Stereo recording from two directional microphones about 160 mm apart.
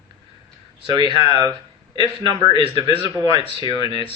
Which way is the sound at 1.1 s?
35° left (ahead or behind).